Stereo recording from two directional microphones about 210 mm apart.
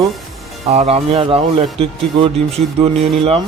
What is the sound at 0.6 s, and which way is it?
Speech, 30° right (ahead or behind).